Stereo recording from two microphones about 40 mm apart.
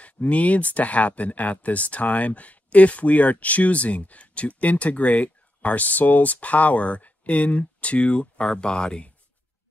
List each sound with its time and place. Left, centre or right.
0.0 s speech: left